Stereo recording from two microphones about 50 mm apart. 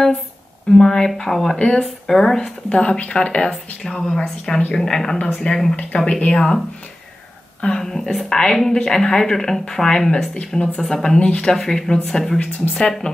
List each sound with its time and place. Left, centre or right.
0.7 s speech: centre
2.7 s speech: left
7.6 s speech: centre
10.3 s speech: left
10.8 s speech: centre
11.5 s speech: centre
12.4 s a woman's voice: left